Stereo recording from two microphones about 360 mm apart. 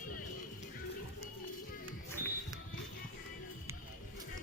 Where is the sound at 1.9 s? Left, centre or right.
Centre.